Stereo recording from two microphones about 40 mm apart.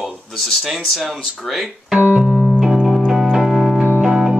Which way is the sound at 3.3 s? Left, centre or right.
Centre.